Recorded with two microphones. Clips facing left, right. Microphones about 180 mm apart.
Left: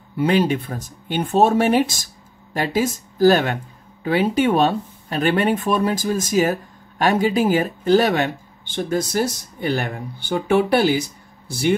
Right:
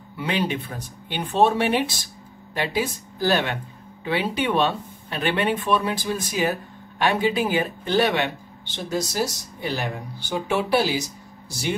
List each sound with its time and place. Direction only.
0.2 s speech: 45° left (ahead or behind)